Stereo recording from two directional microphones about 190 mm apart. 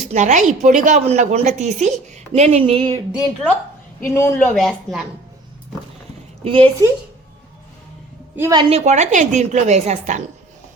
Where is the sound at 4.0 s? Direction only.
15° left (ahead or behind).